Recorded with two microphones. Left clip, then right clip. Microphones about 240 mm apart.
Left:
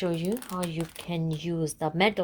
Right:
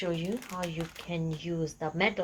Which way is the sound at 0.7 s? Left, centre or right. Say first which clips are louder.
Left 3 dB; left.